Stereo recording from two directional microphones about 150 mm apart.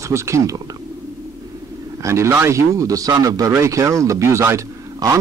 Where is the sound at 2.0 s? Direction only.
15° right (ahead or behind).